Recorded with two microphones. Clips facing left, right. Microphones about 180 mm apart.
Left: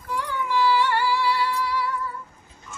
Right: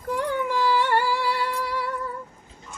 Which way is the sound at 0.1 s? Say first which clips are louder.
Right 2 dB; 50° right (ahead or behind).